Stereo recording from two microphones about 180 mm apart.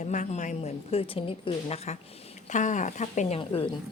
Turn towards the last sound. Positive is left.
turn(degrees=30)  # may be behind; listen again after turning